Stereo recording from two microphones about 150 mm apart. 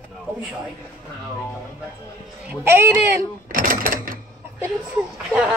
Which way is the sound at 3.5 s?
70° right (ahead or behind).